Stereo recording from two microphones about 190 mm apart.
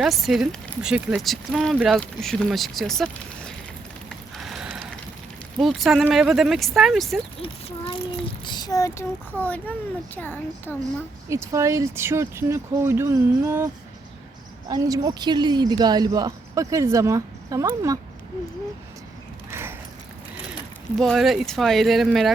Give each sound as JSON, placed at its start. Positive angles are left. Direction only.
{"t": 0.0, "sound": "speech", "side_deg": 0}
{"t": 4.4, "sound": "ratchet", "side_deg": 0}
{"t": 5.5, "sound": "speech", "side_deg": 0}
{"t": 7.3, "sound": "a child's voice", "side_deg": 25}
{"t": 11.3, "sound": "speech", "side_deg": -15}
{"t": 14.7, "sound": "speech", "side_deg": -20}
{"t": 19.5, "sound": "a sound", "side_deg": -15}
{"t": 21.0, "sound": "speech", "side_deg": 0}